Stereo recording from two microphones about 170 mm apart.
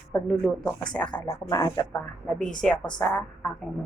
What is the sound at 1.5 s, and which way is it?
Speech, 20° left (ahead or behind).